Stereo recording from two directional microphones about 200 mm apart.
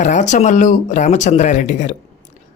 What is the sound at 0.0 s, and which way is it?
Speech, 35° left (ahead or behind).